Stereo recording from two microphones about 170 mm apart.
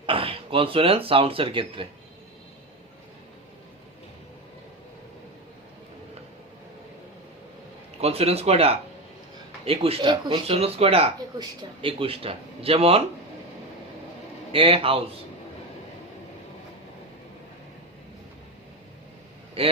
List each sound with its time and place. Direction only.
0.0 s speech: 30° right (ahead or behind)
8.0 s speech: 35° right (ahead or behind)
14.5 s speech: 35° right (ahead or behind)
19.6 s speech: 35° right (ahead or behind)